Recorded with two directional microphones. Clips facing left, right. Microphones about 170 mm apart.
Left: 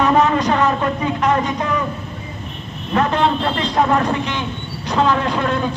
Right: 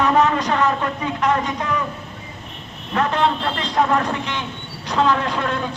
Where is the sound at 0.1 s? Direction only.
10° left (ahead or behind).